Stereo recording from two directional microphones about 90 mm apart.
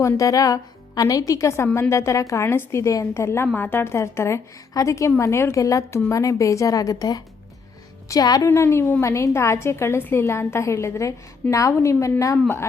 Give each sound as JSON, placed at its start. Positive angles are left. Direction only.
{"t": 0.0, "sound": "a woman's voice", "side_deg": 40}
{"t": 8.4, "sound": "a woman's voice", "side_deg": 30}